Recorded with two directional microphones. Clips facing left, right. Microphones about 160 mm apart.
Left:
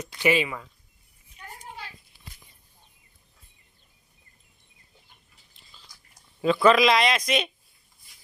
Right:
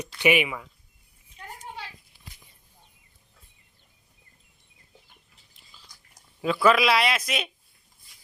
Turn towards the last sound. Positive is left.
turn(degrees=-5)  # may be behind; listen again after turning